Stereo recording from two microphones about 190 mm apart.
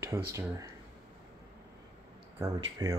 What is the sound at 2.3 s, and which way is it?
Speech, 15° right (ahead or behind).